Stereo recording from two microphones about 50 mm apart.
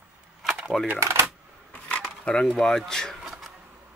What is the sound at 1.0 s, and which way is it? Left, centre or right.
Speech, right.